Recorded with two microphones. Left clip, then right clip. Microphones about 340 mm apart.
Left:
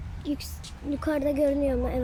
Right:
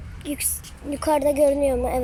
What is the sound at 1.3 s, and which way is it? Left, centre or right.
Speech, right.